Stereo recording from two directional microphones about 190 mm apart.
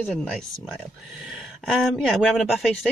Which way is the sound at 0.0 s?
5° left (ahead or behind).